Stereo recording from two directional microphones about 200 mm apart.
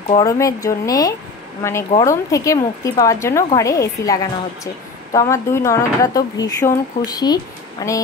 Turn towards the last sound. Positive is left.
turn(degrees=15)  # may be behind; listen again after turning